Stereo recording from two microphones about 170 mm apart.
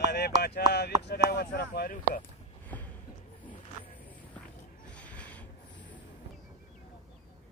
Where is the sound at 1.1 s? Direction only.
65° left (ahead or behind).